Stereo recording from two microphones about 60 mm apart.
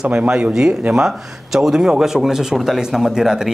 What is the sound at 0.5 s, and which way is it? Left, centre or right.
A man's voice, centre.